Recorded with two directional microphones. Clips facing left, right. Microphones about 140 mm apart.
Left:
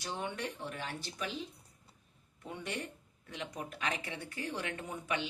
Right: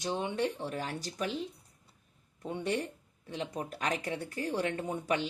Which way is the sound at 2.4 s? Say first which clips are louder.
Right 7 dB; 30° right (ahead or behind).